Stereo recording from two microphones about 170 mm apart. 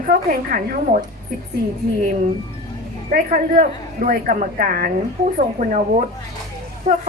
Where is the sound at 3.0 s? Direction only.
50° right (ahead or behind).